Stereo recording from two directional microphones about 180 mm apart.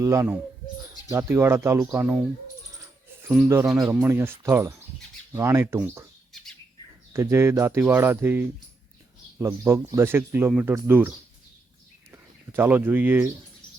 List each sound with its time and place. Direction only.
0.0 s speech: 15° right (ahead or behind)
3.8 s speech: 10° right (ahead or behind)
7.1 s speech: 15° right (ahead or behind)
12.1 s speech: 15° right (ahead or behind)